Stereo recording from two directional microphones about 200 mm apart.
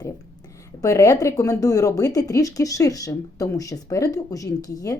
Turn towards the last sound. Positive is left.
turn(degrees=20)  # may be behind; listen again after turning